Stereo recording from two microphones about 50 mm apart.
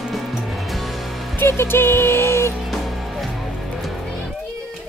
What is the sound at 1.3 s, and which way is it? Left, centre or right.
Music, left.